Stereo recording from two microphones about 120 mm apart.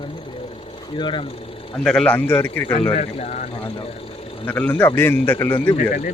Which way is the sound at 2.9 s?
60° left (ahead or behind).